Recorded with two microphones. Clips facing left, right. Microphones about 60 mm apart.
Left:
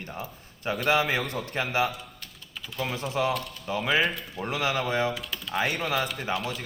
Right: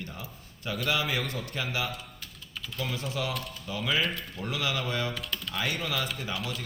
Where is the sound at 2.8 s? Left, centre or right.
Left.